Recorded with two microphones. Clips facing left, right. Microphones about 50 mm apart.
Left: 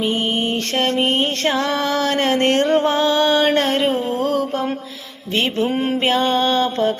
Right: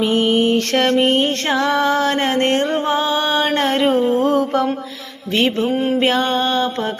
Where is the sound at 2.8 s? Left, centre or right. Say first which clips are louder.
Left 2 dB; centre.